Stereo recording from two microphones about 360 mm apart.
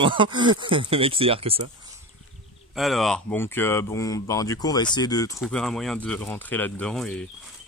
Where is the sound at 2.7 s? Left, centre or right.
Centre.